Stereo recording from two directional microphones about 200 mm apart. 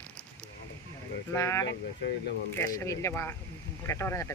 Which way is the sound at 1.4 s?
15° left (ahead or behind).